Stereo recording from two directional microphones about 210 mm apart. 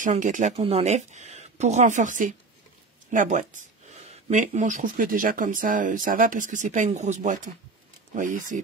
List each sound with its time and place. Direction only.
0.0 s speech: 35° right (ahead or behind)